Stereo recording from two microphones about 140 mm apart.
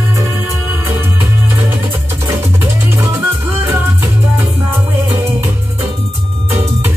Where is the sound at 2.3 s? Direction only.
15° right (ahead or behind).